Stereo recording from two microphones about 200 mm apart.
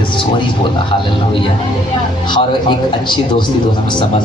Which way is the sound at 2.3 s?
25° left (ahead or behind).